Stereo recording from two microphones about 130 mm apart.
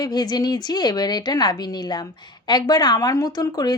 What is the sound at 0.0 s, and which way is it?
A woman's voice, 30° left (ahead or behind).